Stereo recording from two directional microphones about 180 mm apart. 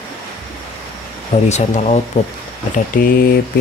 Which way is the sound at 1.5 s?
40° left (ahead or behind).